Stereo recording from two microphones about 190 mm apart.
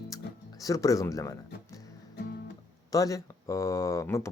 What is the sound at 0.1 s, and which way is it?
Music, 20° left (ahead or behind).